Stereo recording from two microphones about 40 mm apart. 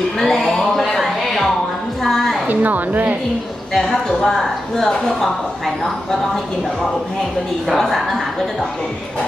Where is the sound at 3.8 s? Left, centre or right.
Centre.